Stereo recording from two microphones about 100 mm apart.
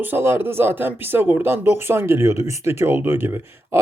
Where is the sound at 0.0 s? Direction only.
20° right (ahead or behind).